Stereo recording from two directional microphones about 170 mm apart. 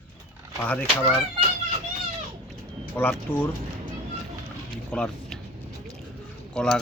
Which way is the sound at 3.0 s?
10° left (ahead or behind).